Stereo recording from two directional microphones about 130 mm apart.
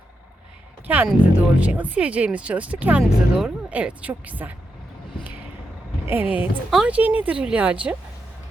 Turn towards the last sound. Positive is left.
turn(degrees=-10)  # may be behind; listen again after turning